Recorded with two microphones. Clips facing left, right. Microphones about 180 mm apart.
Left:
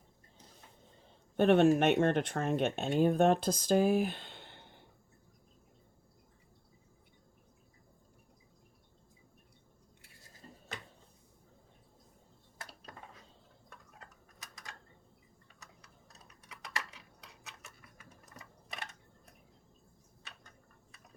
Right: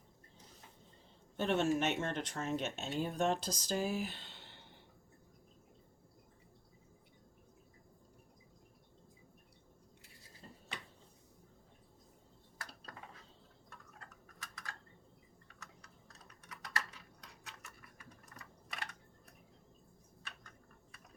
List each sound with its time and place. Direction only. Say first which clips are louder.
1.4 s speech: left 8 dB; 55° left (ahead or behind)
12.9 s dishes: left 2 dB; 25° left (ahead or behind)
14.3 s typing: even; 20° left (ahead or behind)
18.3 s a sound: left 3 dB; 25° left (ahead or behind)